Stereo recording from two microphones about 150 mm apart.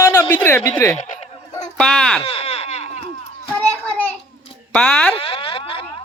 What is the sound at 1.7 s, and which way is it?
Speech, 5° left (ahead or behind).